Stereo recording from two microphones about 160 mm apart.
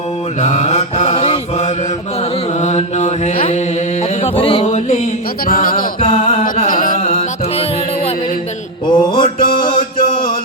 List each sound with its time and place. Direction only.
0.4 s mantra: 45° left (ahead or behind)
4.2 s music: 35° left (ahead or behind)
4.6 s mantra: 45° left (ahead or behind)
5.5 s music: 60° left (ahead or behind)
6.0 s music: 35° left (ahead or behind)
6.7 s music: 55° left (ahead or behind)
7.0 s music: 35° left (ahead or behind)
8.9 s mantra: 30° left (ahead or behind)
10.0 s music: 60° left (ahead or behind)